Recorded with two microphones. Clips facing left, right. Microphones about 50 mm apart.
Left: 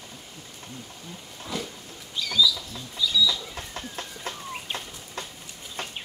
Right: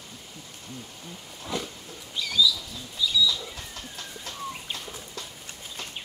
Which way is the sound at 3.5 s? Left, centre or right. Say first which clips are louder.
Left 4 dB; left.